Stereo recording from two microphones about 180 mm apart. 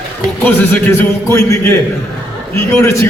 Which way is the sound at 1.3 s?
15° left (ahead or behind).